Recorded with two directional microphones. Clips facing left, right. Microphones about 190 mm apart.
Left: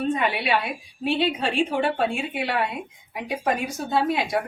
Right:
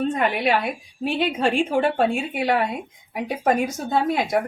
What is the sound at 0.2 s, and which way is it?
Speech, 45° right (ahead or behind).